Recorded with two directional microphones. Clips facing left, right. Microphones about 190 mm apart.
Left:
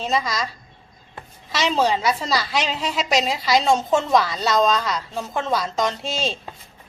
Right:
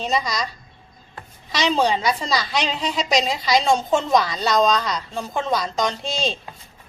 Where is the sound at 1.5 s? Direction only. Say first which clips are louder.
Even; 5° left (ahead or behind).